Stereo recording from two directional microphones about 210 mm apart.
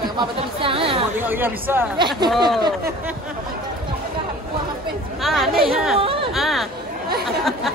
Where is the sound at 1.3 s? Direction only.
10° right (ahead or behind).